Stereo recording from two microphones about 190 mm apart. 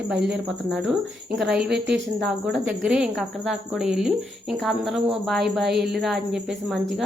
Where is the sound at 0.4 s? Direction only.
Centre (ahead or behind).